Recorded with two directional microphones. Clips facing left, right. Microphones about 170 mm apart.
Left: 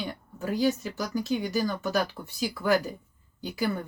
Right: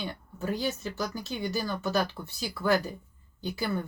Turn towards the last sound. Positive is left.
turn(degrees=15)  # may be behind; listen again after turning